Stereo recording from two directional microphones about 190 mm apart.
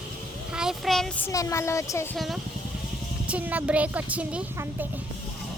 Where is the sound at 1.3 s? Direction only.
15° left (ahead or behind).